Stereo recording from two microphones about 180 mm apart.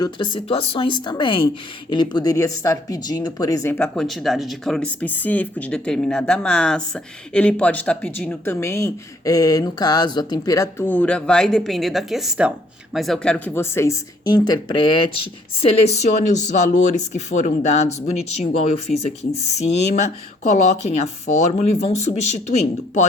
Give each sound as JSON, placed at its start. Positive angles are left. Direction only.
{"t": 0.0, "sound": "speech", "side_deg": 25}